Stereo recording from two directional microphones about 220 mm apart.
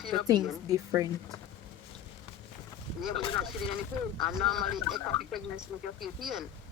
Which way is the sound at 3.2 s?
20° left (ahead or behind).